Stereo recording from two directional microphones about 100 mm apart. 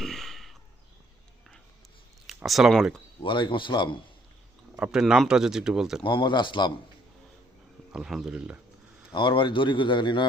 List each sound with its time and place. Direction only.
0.0 s a sound: 5° left (ahead or behind)
2.2 s speech: centre (ahead or behind)
3.2 s a man's voice: 55° left (ahead or behind)
4.8 s speech: 5° right (ahead or behind)
6.0 s a man's voice: 55° left (ahead or behind)
7.9 s speech: 5° right (ahead or behind)
9.1 s a man's voice: 55° left (ahead or behind)